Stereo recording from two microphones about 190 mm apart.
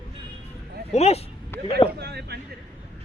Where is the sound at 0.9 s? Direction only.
35° left (ahead or behind).